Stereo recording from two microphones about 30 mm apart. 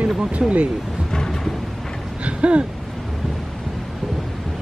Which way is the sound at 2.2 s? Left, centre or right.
Right.